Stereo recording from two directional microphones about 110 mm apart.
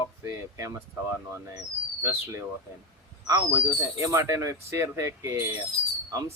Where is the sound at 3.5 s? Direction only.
25° right (ahead or behind).